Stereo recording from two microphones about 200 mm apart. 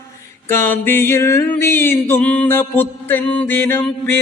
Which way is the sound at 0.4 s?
10° left (ahead or behind).